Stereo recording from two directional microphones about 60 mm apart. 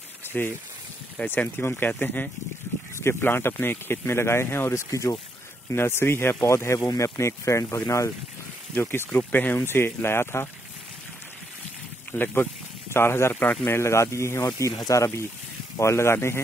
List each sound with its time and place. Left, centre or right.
0.3 s speech: left
3.0 s speech: left
5.7 s speech: left
6.5 s speech: left
6.8 s speech: left
7.2 s speech: left
8.8 s speech: left
12.1 s speech: left
13.3 s speech: left
13.7 s speech: left
15.8 s speech: left